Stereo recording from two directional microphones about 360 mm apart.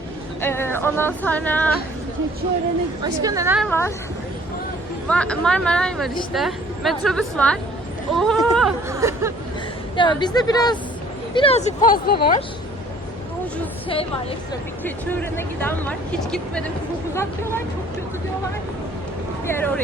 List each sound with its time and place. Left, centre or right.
0.4 s speech: centre
3.0 s speech: centre
5.0 s speech: centre
9.9 s a woman's voice: centre
13.8 s a woman's voice: centre
19.5 s speech: centre